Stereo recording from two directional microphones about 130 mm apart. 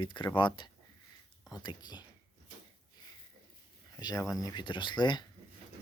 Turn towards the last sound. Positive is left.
turn(degrees=35)  # may be behind; listen again after turning